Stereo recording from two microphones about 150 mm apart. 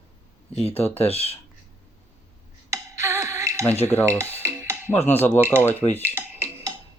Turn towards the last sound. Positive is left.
turn(degrees=-20)  # may be behind; listen again after turning